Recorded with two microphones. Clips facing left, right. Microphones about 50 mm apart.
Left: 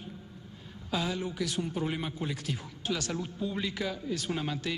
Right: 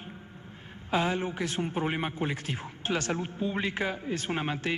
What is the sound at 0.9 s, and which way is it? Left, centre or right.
A man's voice, right.